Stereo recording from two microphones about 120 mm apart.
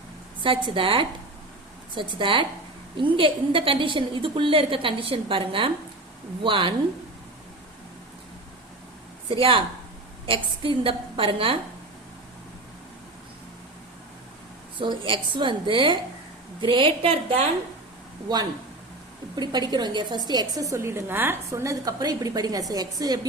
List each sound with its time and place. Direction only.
0.4 s a woman's voice: 45° right (ahead or behind)
9.3 s a woman's voice: 50° right (ahead or behind)
14.8 s a woman's voice: 45° right (ahead or behind)
19.4 s a woman's voice: 35° right (ahead or behind)